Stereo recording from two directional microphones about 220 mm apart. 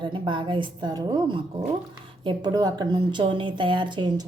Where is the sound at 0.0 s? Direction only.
20° right (ahead or behind).